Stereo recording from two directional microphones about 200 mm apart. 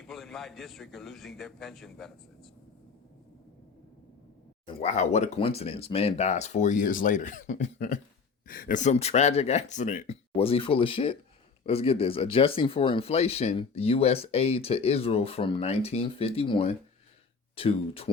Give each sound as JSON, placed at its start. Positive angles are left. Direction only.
{"t": 0.0, "sound": "a man's voice", "side_deg": 0}
{"t": 4.6, "sound": "speech", "side_deg": 35}